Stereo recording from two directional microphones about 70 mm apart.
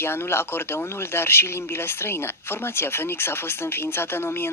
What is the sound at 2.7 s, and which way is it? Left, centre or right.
Speech, left.